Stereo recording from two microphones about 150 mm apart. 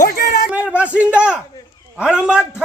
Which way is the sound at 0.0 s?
90° left.